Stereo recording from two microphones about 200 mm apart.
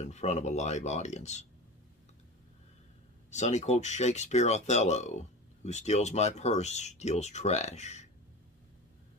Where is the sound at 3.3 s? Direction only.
35° left (ahead or behind).